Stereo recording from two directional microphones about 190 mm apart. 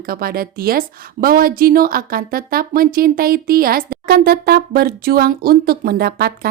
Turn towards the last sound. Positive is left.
turn(degrees=-55)  # may be behind; listen again after turning